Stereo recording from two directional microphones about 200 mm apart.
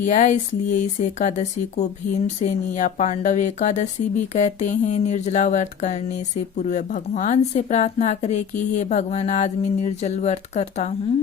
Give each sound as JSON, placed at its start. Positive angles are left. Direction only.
{"t": 0.0, "sound": "speech", "side_deg": 35}